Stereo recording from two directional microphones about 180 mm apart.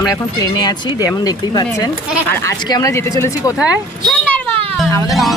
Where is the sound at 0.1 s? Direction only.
20° left (ahead or behind).